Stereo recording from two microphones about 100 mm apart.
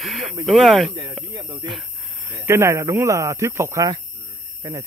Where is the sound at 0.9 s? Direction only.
45° right (ahead or behind).